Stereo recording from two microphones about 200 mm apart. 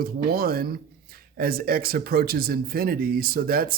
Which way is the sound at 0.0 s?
50° right (ahead or behind).